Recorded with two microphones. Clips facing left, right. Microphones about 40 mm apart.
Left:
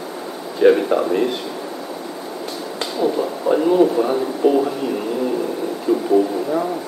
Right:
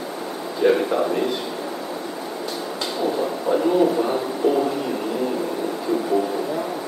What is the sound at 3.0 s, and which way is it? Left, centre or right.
Speech, centre.